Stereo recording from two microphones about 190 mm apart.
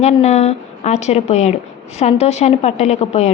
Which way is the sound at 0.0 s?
35° left (ahead or behind).